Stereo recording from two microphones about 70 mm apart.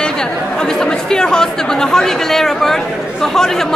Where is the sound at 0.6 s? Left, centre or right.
Centre.